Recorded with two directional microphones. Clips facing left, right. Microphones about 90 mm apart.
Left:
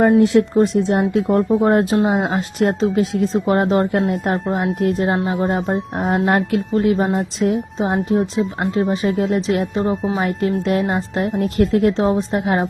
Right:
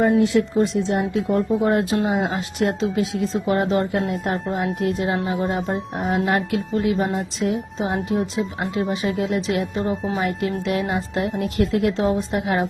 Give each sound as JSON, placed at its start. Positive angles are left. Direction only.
{"t": 0.2, "sound": "a woman's voice", "side_deg": 50}